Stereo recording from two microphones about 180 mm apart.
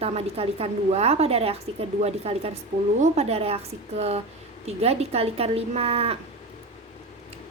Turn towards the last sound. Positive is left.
turn(degrees=-35)  # may be behind; listen again after turning